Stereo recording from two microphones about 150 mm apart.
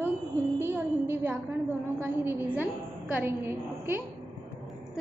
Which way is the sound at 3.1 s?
15° right (ahead or behind).